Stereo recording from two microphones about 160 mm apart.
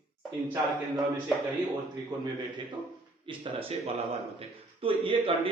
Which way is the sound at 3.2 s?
35° right (ahead or behind).